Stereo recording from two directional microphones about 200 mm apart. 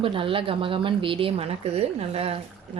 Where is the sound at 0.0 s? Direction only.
25° right (ahead or behind).